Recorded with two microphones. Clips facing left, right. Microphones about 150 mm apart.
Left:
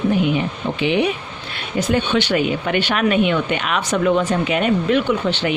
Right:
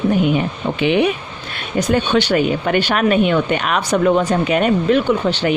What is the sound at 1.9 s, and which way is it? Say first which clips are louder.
Speech: right 3 dB; 40° right (ahead or behind).